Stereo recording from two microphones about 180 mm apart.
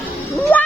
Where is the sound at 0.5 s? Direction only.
10° left (ahead or behind).